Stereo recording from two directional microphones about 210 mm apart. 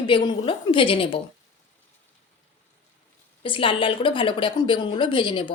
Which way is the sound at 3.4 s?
25° left (ahead or behind).